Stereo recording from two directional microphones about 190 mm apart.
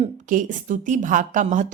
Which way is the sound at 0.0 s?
45° right (ahead or behind).